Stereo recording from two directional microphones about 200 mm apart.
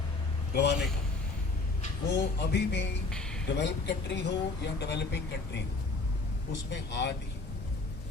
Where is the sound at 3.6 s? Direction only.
60° left (ahead or behind).